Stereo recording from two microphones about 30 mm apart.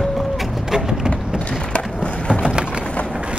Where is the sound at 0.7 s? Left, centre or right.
Right.